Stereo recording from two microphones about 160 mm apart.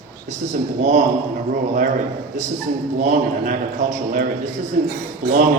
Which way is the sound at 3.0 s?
55° right (ahead or behind).